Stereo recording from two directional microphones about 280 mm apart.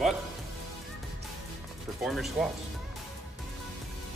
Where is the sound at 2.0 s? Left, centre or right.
Centre.